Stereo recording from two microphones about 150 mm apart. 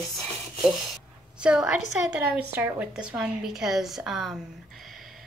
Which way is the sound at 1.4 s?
5° right (ahead or behind).